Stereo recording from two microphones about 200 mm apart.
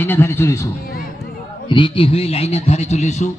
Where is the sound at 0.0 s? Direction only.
10° left (ahead or behind).